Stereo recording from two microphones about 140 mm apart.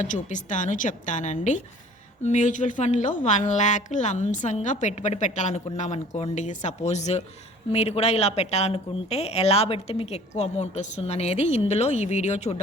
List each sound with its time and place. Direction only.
0.0 s a woman's voice: 60° left (ahead or behind)